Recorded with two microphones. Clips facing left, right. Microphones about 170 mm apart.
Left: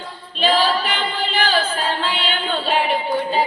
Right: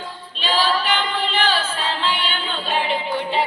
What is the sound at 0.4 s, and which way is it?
Singing, 40° left (ahead or behind).